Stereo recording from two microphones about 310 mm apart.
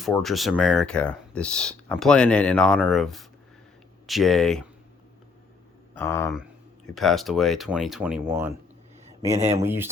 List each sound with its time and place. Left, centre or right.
0.0 s speech: centre
5.9 s speech: centre
9.3 s speech: right
9.6 s speech: centre